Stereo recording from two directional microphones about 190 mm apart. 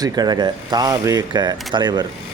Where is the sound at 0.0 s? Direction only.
20° right (ahead or behind).